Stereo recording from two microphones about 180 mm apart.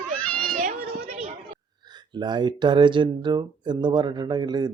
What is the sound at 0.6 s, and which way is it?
Children playing, 45° right (ahead or behind).